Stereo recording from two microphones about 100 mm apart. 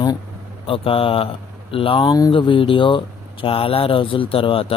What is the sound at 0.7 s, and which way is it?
Speech, 65° left (ahead or behind).